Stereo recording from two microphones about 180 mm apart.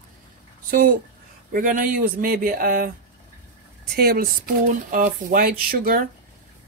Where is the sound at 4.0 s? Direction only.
55° right (ahead or behind).